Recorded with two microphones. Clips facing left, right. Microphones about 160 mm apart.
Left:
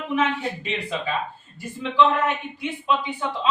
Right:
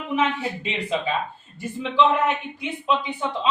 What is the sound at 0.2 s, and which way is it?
A man's voice, 20° right (ahead or behind).